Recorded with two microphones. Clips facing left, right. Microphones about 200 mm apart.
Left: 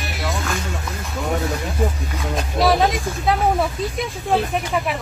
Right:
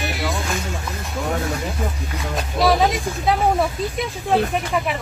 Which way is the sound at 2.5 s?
Centre (ahead or behind).